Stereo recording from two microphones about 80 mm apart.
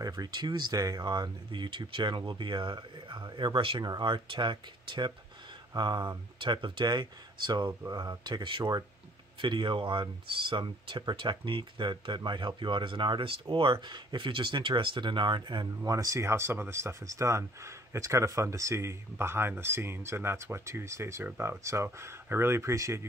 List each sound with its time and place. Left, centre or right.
0.0 s speech: right
6.4 s speech: right
7.8 s speech: right
15.8 s speech: right